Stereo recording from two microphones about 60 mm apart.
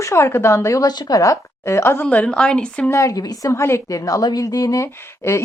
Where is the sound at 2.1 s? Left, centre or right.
Centre.